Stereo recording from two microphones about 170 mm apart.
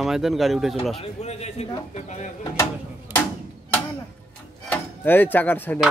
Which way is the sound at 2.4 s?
25° left (ahead or behind).